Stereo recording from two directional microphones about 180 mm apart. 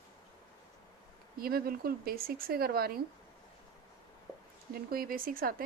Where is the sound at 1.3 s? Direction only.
55° right (ahead or behind).